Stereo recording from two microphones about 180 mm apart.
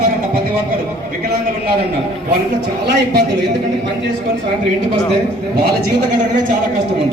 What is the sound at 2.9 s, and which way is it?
Speech, 70° right (ahead or behind).